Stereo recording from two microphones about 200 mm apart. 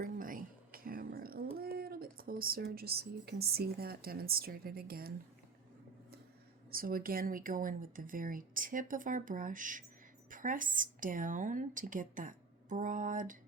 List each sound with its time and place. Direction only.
0.0 s a sound: 45° right (ahead or behind)
1.5 s speech: 50° right (ahead or behind)
6.7 s a woman's voice: 45° right (ahead or behind)